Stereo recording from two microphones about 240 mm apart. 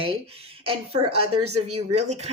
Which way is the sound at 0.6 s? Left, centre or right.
Right.